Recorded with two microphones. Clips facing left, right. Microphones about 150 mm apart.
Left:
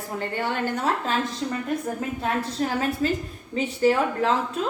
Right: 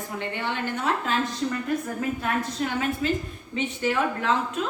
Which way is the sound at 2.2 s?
35° left (ahead or behind).